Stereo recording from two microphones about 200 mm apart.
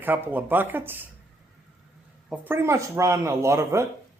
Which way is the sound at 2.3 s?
10° right (ahead or behind).